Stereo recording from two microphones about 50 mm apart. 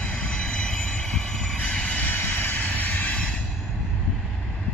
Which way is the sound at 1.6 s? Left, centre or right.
Left.